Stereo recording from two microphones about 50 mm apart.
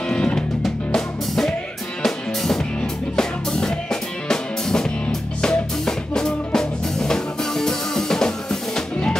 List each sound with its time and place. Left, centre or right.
0.1 s music: centre
2.0 s music: centre